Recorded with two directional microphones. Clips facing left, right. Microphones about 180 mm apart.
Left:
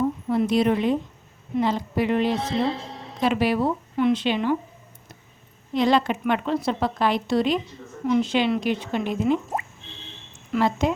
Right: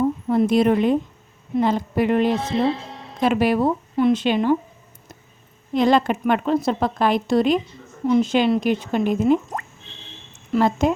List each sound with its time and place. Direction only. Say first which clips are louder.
0.3 s a woman's voice: right 4 dB; 50° right (ahead or behind)
5.7 s a woman's voice: right 3 dB; 50° right (ahead or behind)
10.5 s a woman's voice: right 4 dB; 45° right (ahead or behind)